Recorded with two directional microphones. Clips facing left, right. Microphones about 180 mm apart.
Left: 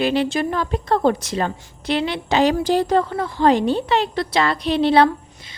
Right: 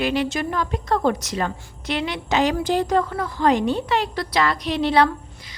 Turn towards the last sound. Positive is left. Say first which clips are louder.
# left 3 dB
turn(degrees=30)  # may be behind; listen again after turning